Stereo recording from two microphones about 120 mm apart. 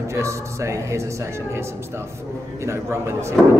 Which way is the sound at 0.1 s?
25° right (ahead or behind).